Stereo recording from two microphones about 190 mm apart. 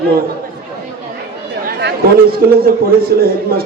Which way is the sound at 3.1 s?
55° right (ahead or behind).